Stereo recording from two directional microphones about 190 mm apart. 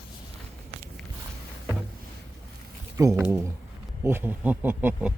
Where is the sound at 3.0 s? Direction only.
15° right (ahead or behind).